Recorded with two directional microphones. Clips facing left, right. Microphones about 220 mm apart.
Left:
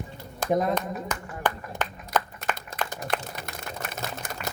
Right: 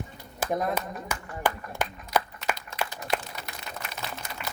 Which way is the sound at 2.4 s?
50° left (ahead or behind).